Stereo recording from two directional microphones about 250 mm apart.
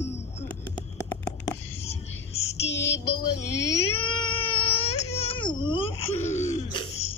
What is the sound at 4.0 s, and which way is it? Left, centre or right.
Baby cry, centre.